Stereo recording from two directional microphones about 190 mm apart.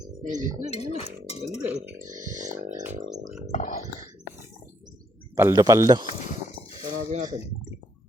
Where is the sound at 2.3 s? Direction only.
40° right (ahead or behind).